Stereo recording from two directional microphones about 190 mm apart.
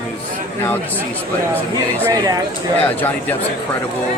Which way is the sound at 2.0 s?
20° right (ahead or behind).